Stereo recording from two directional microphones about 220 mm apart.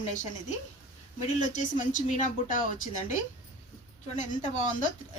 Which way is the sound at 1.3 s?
35° left (ahead or behind).